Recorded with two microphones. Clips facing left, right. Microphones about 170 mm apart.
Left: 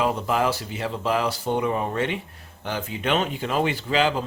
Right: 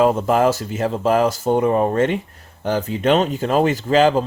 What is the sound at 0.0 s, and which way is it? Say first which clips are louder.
Speech: right 7 dB; 45° right (ahead or behind).